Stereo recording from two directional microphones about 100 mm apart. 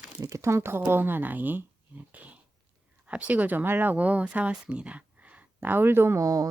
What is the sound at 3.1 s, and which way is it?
A woman's voice, 15° right (ahead or behind).